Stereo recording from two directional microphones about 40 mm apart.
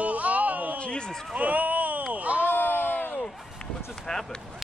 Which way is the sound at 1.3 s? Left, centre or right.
Right.